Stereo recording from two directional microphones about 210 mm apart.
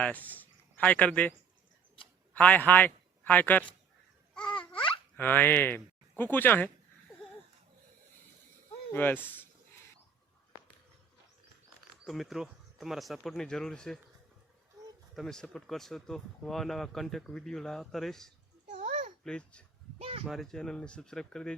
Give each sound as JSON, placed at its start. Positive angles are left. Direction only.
{"t": 0.0, "sound": "a man's voice", "side_deg": 5}
{"t": 2.3, "sound": "a man's voice", "side_deg": 5}
{"t": 5.1, "sound": "speech", "side_deg": 10}
{"t": 8.9, "sound": "speech", "side_deg": 10}
{"t": 12.0, "sound": "speech", "side_deg": 0}
{"t": 15.1, "sound": "speech", "side_deg": 0}
{"t": 18.7, "sound": "babbling", "side_deg": -35}
{"t": 19.2, "sound": "speech", "side_deg": 5}
{"t": 20.0, "sound": "speech", "side_deg": -30}
{"t": 20.2, "sound": "speech", "side_deg": 0}